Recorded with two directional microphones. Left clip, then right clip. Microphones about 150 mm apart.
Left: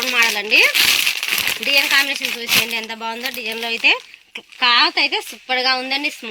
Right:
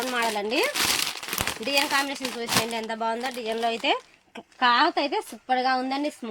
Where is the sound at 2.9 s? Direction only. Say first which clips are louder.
Left 3 dB; 35° right (ahead or behind).